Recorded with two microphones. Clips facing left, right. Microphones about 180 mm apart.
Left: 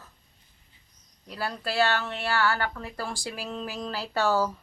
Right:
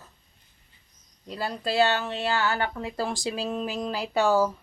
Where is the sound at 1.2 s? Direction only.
20° right (ahead or behind).